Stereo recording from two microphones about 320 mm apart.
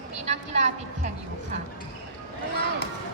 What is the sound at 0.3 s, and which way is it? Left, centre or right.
Speech, right.